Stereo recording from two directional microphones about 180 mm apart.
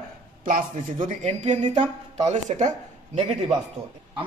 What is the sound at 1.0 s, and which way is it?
A woman's voice, 40° right (ahead or behind).